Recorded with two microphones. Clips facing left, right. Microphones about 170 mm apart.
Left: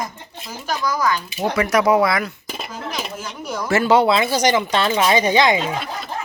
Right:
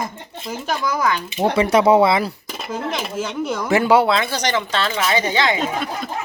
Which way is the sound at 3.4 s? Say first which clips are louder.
Even; 15° right (ahead or behind).